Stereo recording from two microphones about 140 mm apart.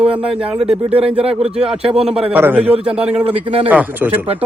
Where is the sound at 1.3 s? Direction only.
5° right (ahead or behind).